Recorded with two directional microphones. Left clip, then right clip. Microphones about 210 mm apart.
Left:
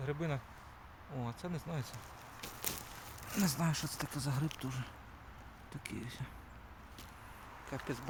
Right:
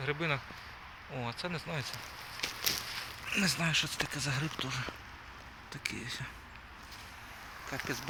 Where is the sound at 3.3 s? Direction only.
20° left (ahead or behind).